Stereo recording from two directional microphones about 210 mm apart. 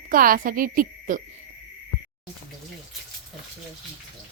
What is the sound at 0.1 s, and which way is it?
Speech, 40° right (ahead or behind).